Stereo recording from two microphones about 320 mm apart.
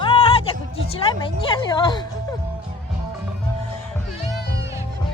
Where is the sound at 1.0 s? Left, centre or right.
Centre.